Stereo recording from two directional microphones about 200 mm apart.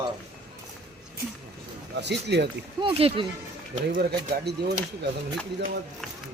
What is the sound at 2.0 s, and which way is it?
Speech, 60° right (ahead or behind).